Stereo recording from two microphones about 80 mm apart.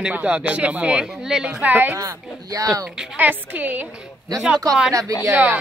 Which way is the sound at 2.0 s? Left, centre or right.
Right.